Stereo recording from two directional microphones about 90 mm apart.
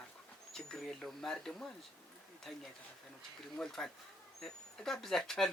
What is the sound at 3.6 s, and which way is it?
Speech, 5° left (ahead or behind).